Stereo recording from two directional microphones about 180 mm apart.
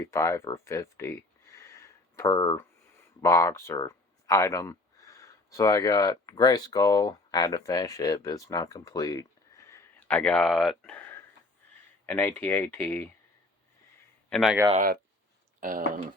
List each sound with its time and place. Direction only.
0.0 s speech: 15° left (ahead or behind)
9.6 s a sound: 10° left (ahead or behind)
12.0 s speech: 15° left (ahead or behind)
14.3 s speech: centre (ahead or behind)
15.6 s speech: 50° right (ahead or behind)